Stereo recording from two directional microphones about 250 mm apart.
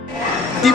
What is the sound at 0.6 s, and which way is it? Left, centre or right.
Music, centre.